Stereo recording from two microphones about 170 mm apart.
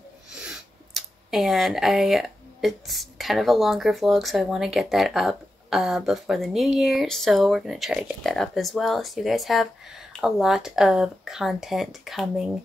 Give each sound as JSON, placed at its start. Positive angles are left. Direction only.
{"t": 0.9, "sound": "speech", "side_deg": 0}